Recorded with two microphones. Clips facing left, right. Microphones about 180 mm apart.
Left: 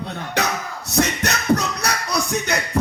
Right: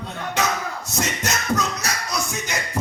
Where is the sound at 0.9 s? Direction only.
65° left (ahead or behind).